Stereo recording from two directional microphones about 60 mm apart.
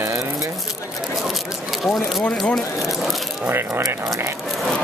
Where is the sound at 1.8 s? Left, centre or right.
Centre.